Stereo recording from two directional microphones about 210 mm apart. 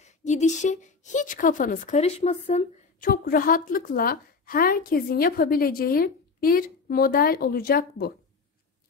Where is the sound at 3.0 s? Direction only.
45° left (ahead or behind).